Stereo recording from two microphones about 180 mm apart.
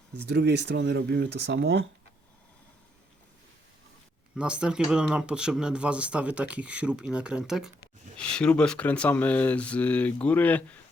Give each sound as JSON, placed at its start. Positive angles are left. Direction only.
{"t": 0.2, "sound": "speech", "side_deg": -70}
{"t": 4.4, "sound": "speech", "side_deg": -5}